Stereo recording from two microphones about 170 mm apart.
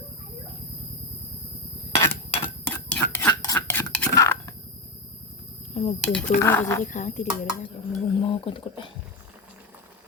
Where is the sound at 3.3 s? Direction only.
20° left (ahead or behind).